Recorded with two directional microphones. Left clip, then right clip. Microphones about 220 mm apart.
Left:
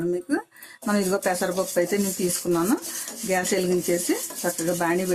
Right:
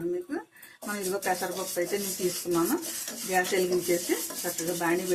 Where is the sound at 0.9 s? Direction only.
55° left (ahead or behind).